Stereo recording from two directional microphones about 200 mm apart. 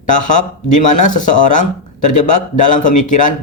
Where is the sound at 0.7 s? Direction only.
40° left (ahead or behind).